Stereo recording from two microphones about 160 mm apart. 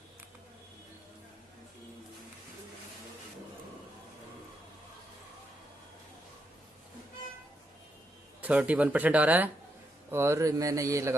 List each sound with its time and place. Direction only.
8.4 s speech: 10° right (ahead or behind)